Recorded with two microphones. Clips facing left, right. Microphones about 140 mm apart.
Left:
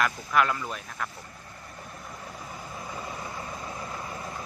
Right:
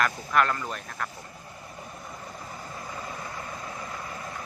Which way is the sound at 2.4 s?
5° left (ahead or behind).